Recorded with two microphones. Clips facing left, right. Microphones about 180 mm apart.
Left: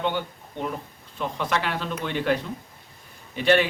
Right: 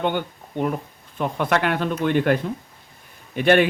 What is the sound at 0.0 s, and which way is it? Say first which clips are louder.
Speech: right 3 dB; 55° right (ahead or behind).